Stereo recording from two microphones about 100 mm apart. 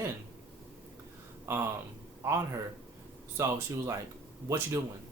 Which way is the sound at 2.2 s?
25° right (ahead or behind).